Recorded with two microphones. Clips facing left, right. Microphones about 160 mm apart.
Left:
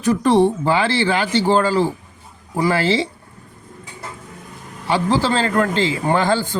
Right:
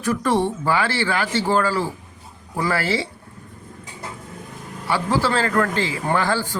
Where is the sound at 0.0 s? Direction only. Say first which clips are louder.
Left 6 dB; 20° left (ahead or behind).